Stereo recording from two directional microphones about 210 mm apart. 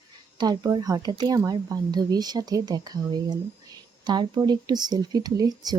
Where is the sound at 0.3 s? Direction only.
20° right (ahead or behind).